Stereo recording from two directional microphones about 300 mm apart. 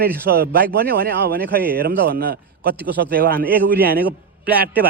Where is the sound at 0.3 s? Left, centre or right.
Right.